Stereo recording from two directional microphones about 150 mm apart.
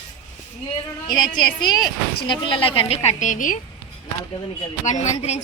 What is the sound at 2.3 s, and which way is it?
A woman's voice, 35° left (ahead or behind).